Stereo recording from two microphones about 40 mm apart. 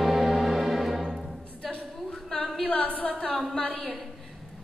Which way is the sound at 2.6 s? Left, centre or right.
Left.